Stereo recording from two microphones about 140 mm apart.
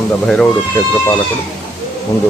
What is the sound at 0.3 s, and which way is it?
Speech, 5° left (ahead or behind).